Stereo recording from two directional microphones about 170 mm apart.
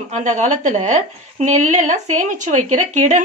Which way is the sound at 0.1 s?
45° right (ahead or behind).